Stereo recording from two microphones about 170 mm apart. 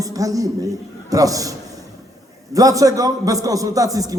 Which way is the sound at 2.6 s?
20° right (ahead or behind).